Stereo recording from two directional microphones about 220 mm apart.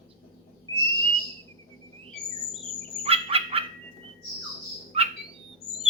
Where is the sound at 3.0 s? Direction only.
25° right (ahead or behind).